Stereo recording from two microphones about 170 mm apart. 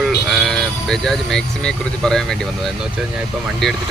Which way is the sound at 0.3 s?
Centre (ahead or behind).